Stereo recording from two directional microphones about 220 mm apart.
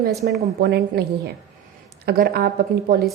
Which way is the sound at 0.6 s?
45° right (ahead or behind).